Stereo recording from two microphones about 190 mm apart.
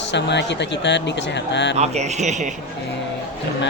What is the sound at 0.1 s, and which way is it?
Speech, 65° left (ahead or behind).